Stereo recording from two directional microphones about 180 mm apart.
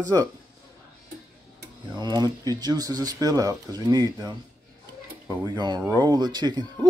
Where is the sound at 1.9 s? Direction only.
20° right (ahead or behind).